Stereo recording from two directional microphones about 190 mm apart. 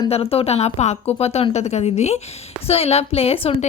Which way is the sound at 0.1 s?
30° left (ahead or behind).